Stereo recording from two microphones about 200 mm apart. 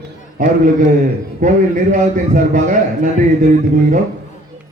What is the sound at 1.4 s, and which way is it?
A man's voice, 40° right (ahead or behind).